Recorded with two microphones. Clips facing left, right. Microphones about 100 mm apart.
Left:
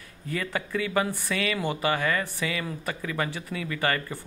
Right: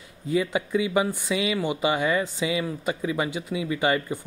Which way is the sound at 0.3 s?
15° right (ahead or behind).